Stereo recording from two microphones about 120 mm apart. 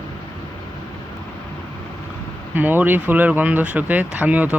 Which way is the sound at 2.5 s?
15° right (ahead or behind).